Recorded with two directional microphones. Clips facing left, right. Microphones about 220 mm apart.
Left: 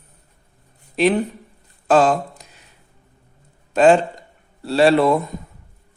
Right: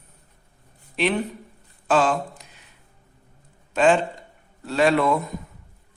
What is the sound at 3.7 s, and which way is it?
Speech, 40° left (ahead or behind).